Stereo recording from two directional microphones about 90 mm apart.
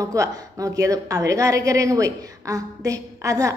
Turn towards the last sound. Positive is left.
turn(degrees=-40)  # may be behind; listen again after turning